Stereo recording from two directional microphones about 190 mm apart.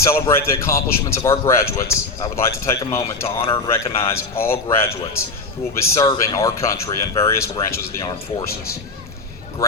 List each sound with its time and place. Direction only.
0.1 s speech: 15° left (ahead or behind)